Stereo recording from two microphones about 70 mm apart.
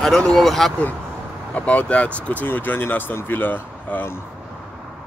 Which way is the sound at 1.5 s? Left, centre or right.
Centre.